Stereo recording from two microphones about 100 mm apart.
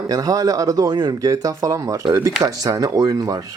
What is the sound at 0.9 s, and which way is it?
Speech, 45° right (ahead or behind).